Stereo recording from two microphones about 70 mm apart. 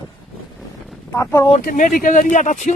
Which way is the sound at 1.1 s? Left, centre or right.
Left.